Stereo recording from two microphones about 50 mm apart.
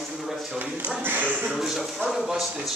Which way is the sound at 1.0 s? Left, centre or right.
Right.